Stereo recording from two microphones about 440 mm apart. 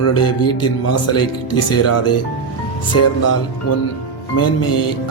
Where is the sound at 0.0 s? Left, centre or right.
Left.